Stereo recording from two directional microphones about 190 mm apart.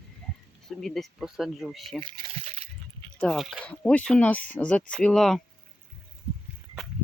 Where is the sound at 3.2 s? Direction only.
Centre (ahead or behind).